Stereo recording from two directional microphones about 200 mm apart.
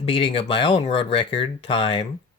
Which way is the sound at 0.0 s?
25° left (ahead or behind).